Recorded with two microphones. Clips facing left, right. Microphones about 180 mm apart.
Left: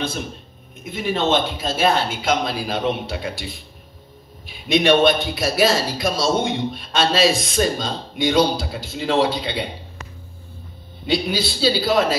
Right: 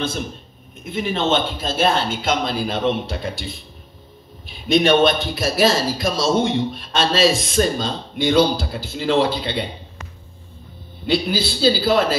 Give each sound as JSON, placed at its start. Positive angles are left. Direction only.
{"t": 0.8, "sound": "speech", "side_deg": 0}
{"t": 11.1, "sound": "speech", "side_deg": 0}